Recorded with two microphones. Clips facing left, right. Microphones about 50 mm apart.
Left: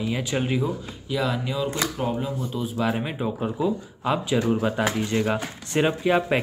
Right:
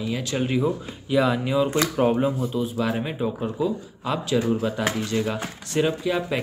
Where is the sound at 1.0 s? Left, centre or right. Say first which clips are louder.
Right 5 dB; centre.